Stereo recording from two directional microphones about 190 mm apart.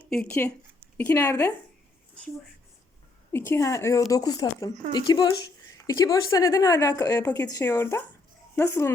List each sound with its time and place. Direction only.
0.1 s speech: 5° left (ahead or behind)
3.3 s speech: 15° left (ahead or behind)